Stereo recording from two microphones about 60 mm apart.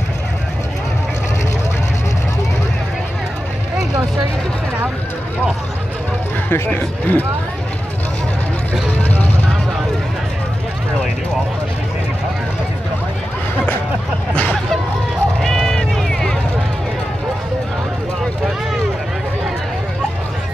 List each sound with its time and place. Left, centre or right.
6.5 s speech: left
9.1 s vehicle: left
14.3 s hubbub: left
15.4 s run: centre